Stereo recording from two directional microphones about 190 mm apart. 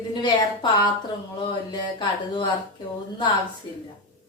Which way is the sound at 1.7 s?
25° left (ahead or behind).